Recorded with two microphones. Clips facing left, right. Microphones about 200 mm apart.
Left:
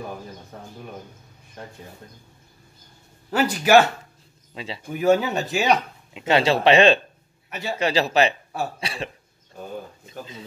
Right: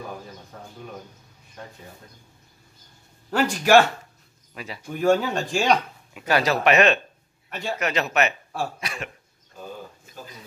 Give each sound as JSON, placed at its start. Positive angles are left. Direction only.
{"t": 3.3, "sound": "speech", "side_deg": 5}
{"t": 4.6, "sound": "speech", "side_deg": 25}
{"t": 4.8, "sound": "speech", "side_deg": 5}
{"t": 6.1, "sound": "speech", "side_deg": 25}
{"t": 7.4, "sound": "a man's voice", "side_deg": 5}
{"t": 7.8, "sound": "speech", "side_deg": 30}